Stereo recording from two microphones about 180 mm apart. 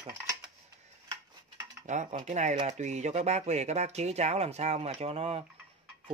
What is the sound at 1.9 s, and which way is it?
Speech, 45° right (ahead or behind).